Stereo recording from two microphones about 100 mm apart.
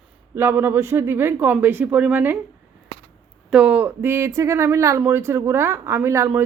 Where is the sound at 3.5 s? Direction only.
10° right (ahead or behind).